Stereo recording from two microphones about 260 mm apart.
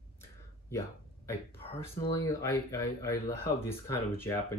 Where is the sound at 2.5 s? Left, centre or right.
Centre.